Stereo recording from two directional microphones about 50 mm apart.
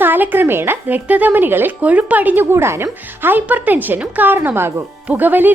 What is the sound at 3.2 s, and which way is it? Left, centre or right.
Speech, right.